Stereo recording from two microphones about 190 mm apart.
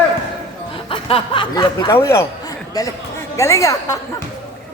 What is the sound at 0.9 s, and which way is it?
A woman's voice, 30° left (ahead or behind).